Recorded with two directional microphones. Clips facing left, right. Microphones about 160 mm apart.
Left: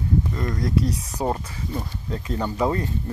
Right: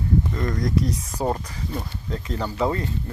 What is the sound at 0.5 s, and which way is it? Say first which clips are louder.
Speech: left 1 dB; 35° left (ahead or behind).